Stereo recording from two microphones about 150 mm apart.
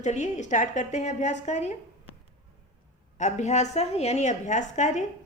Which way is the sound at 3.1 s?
50° left (ahead or behind).